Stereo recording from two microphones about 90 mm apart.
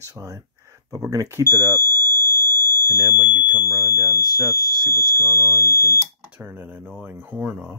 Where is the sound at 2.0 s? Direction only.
30° left (ahead or behind).